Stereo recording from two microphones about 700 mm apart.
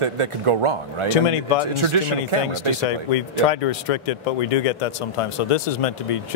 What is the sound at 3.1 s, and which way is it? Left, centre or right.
Speech, left.